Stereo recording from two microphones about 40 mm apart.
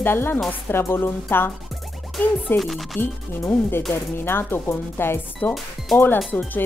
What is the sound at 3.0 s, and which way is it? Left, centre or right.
Speech, left.